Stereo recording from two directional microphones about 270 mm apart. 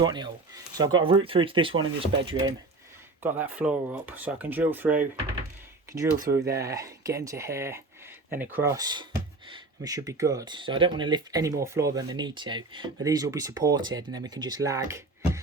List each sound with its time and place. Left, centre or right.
0.0 s speech: centre
3.2 s speech: centre
6.3 s speech: centre